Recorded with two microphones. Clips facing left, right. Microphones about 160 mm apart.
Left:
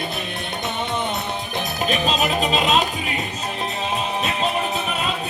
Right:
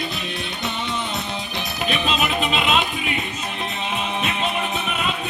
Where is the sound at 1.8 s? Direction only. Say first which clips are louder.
Left 1 dB; 40° left (ahead or behind).